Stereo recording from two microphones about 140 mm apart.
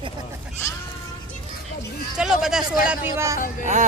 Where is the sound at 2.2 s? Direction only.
5° right (ahead or behind).